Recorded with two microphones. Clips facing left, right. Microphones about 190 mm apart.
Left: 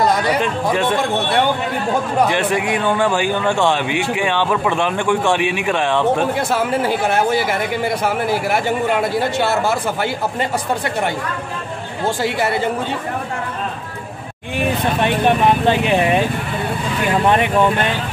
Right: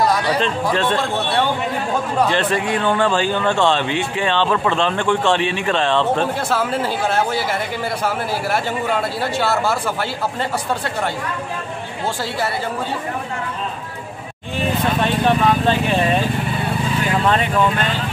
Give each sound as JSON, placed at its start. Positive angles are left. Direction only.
{"t": 0.0, "sound": "speech", "side_deg": 20}
{"t": 12.2, "sound": "speech", "side_deg": 20}
{"t": 14.6, "sound": "vehicle", "side_deg": 15}
{"t": 17.2, "sound": "speech", "side_deg": 15}